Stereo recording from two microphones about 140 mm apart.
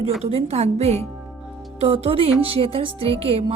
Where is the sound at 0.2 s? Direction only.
45° right (ahead or behind).